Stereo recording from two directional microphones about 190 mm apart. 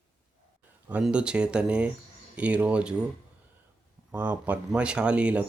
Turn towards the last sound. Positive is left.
turn(degrees=-5)  # may be behind; listen again after turning